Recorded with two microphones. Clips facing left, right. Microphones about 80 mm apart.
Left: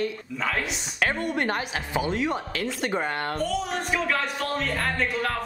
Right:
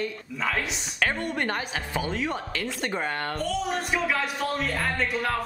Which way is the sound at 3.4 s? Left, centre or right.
Centre.